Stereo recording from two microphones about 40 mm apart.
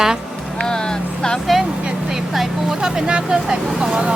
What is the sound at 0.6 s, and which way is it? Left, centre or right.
Vehicle, centre.